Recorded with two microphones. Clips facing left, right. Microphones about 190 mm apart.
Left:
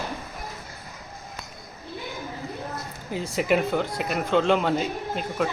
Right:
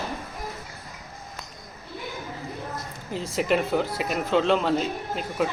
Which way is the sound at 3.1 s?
Centre (ahead or behind).